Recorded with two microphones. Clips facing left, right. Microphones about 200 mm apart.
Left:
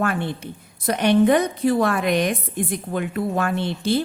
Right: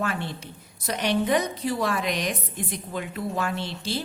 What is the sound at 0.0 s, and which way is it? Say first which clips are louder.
A woman's voice: left 6 dB; 55° left (ahead or behind).